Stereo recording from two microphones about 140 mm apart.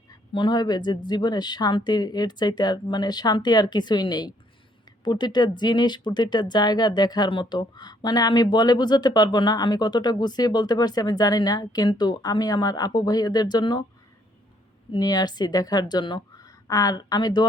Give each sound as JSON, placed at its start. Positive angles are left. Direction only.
{"t": 0.3, "sound": "speech", "side_deg": 35}
{"t": 14.9, "sound": "speech", "side_deg": 30}